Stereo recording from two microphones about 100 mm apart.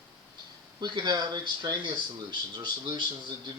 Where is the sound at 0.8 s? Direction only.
50° right (ahead or behind).